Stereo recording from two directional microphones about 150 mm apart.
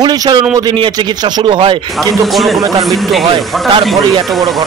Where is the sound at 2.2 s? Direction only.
Centre (ahead or behind).